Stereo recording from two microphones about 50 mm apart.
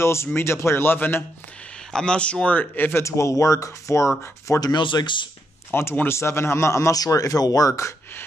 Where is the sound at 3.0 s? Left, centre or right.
Left.